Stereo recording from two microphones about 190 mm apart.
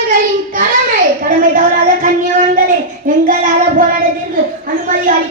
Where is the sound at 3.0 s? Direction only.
45° right (ahead or behind).